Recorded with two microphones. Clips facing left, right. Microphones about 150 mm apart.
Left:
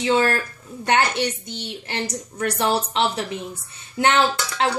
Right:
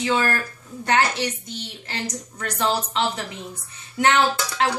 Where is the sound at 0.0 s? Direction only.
25° left (ahead or behind).